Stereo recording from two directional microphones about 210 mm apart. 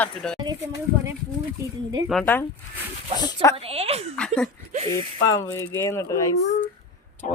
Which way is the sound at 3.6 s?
30° right (ahead or behind).